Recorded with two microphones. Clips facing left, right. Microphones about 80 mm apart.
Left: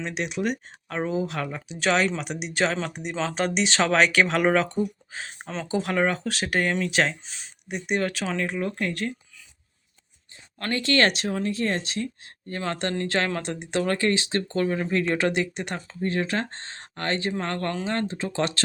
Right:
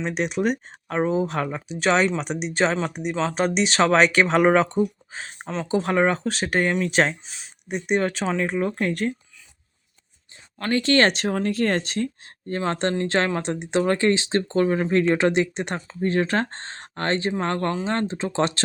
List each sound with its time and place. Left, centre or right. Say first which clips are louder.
0.1 s speech: right 4 dB; right
0.9 s speech: right 5 dB; right
1.8 s speech: right 3 dB; right
2.7 s speech: right 4 dB; centre
6.8 s speech: right 3 dB; right
7.3 s speech: even; centre
7.7 s speech: right 4 dB; right
10.7 s speech: right 3 dB; right
11.2 s speech: right 4 dB; right